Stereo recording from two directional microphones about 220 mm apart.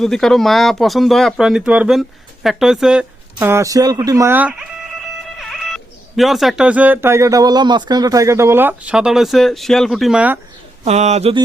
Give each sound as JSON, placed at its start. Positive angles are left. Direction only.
{"t": 0.0, "sound": "speech", "side_deg": 0}
{"t": 10.8, "sound": "speech", "side_deg": -30}